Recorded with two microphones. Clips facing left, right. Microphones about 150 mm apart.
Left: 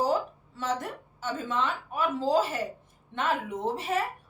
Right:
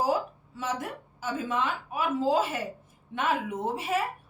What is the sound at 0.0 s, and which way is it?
A woman's voice, 10° right (ahead or behind).